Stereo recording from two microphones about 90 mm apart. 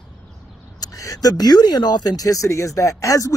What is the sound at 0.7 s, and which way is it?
Speech, 45° left (ahead or behind).